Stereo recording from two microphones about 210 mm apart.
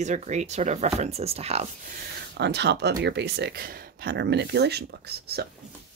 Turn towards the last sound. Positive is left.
turn(degrees=-50)  # may be behind; listen again after turning